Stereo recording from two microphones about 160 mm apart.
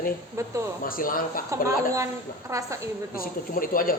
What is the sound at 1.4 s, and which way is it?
A woman's voice, 20° right (ahead or behind).